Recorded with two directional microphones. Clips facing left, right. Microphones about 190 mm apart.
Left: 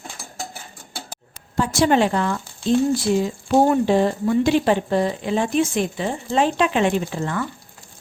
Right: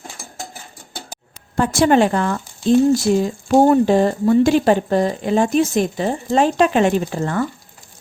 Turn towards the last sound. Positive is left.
turn(degrees=-40)  # may be behind; listen again after turning